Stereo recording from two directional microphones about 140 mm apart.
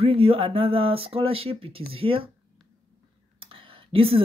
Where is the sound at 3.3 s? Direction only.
40° right (ahead or behind).